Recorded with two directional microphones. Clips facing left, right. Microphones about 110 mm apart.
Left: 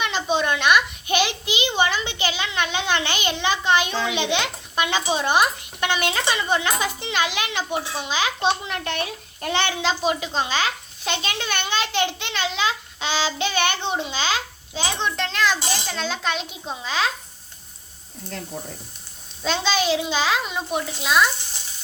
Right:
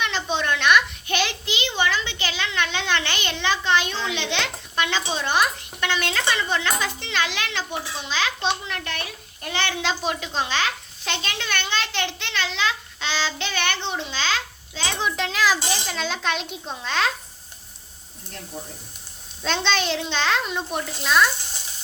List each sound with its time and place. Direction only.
0.0 s a child's voice: 5° left (ahead or behind); by 9.6 s 25° left (ahead or behind)
9.8 s a child's voice: 5° left (ahead or behind)
14.9 s a child's voice: 5° right (ahead or behind)
19.4 s a child's voice: 5° left (ahead or behind)